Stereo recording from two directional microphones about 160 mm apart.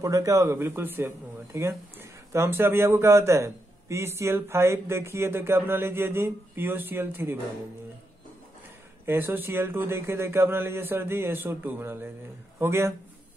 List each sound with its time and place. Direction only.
0.0 s speech: 20° right (ahead or behind)
9.0 s speech: 15° right (ahead or behind)